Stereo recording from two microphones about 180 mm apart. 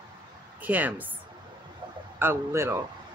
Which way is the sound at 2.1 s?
15° right (ahead or behind).